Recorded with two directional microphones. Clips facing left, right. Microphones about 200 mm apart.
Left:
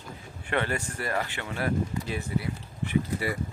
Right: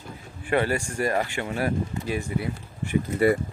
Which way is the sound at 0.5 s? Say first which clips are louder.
Right 5 dB; 10° right (ahead or behind).